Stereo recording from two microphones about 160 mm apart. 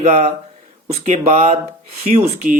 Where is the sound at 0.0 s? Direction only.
45° right (ahead or behind).